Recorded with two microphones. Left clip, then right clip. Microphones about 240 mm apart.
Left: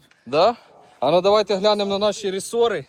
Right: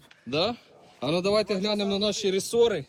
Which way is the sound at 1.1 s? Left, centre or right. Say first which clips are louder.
Left 7 dB; left.